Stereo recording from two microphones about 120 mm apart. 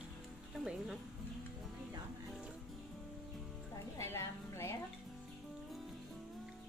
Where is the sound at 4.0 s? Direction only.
20° left (ahead or behind).